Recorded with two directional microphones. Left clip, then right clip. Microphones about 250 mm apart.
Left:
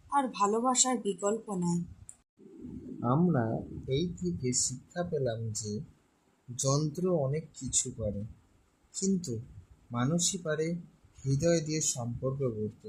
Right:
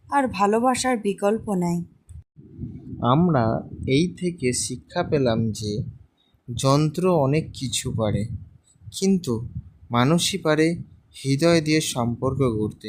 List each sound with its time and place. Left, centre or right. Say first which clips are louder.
0.1 s speech: right 8 dB; right
3.0 s speech: right 10 dB; right
9.0 s speech: right 10 dB; right